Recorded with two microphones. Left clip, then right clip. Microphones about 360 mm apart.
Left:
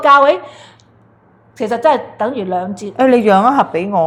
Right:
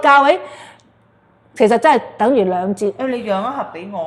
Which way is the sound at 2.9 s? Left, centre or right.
Left.